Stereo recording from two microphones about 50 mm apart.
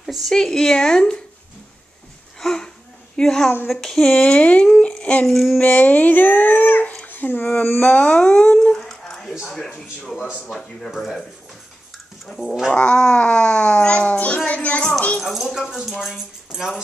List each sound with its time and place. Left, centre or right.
0.3 s a woman's voice: centre
2.4 s a sound: centre
3.2 s a woman's voice: centre
4.1 s a child's voice: left
5.2 s speech: centre
5.6 s a child's voice: left
8.7 s a sound: centre
9.4 s a woman's voice: centre
12.3 s a woman's voice: centre
12.7 s a child's voice: left
15.1 s speech: centre